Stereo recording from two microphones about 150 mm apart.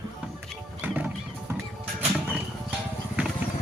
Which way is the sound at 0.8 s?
10° right (ahead or behind).